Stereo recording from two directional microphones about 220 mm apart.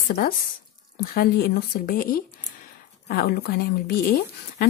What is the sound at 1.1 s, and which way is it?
A woman's voice, 45° left (ahead or behind).